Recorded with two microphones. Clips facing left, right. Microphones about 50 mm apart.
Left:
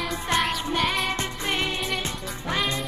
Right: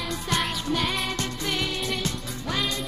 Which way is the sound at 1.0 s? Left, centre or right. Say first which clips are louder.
Left 2 dB; left.